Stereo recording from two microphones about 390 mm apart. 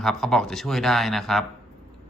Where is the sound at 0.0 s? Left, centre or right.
Centre.